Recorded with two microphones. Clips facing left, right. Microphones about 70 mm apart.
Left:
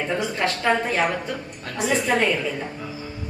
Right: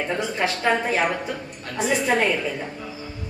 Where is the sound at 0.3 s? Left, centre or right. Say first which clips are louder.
Even; centre.